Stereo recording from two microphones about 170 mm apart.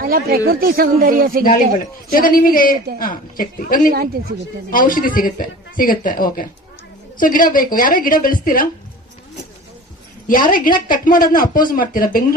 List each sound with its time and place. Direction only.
0.0 s speech: 60° right (ahead or behind)
2.1 s a man's voice: 55° left (ahead or behind)
3.9 s speech: 65° right (ahead or behind)
4.7 s a man's voice: 55° left (ahead or behind)
10.2 s a man's voice: 55° left (ahead or behind)